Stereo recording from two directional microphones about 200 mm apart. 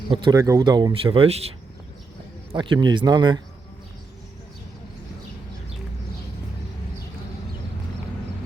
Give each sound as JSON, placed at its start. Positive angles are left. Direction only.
{"t": 0.1, "sound": "speech", "side_deg": -15}